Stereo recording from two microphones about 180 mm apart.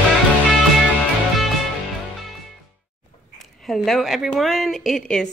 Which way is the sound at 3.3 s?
Centre (ahead or behind).